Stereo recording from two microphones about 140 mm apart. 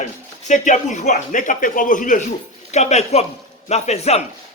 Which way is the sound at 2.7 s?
55° left (ahead or behind).